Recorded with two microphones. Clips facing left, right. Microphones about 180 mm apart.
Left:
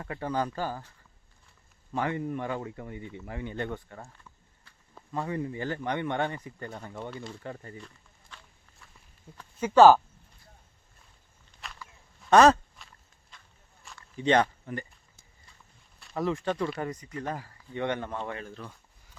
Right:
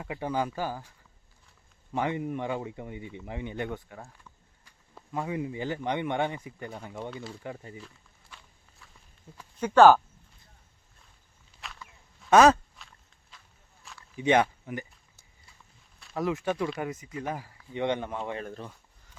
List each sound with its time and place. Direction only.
0.0 s speech: 10° right (ahead or behind)
8.8 s walk: centre (ahead or behind)
9.6 s speech: 5° left (ahead or behind)
11.6 s walk: centre (ahead or behind)
12.2 s a sound: centre (ahead or behind)
16.0 s speech: centre (ahead or behind)
18.6 s speech: 25° right (ahead or behind)